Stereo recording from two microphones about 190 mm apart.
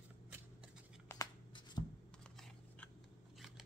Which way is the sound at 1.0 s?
15° left (ahead or behind).